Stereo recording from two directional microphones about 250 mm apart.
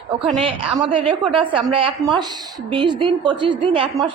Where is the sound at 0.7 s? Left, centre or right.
Centre.